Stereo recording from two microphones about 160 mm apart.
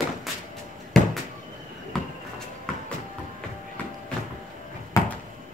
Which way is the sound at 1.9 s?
Centre (ahead or behind).